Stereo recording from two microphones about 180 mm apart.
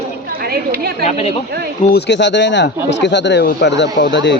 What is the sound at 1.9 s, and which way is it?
Speech, 70° left (ahead or behind).